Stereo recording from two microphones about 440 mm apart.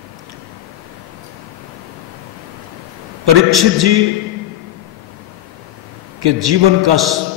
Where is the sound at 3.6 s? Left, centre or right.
Right.